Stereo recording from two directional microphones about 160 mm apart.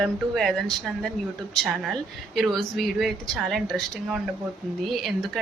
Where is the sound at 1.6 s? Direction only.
Centre (ahead or behind).